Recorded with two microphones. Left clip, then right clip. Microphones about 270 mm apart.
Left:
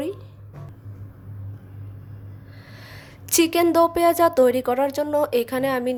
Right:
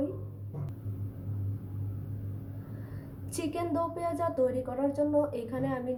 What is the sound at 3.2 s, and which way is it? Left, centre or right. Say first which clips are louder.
A woman's voice: left 15 dB; left.